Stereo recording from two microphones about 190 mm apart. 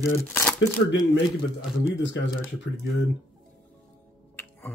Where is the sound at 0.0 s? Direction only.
10° left (ahead or behind).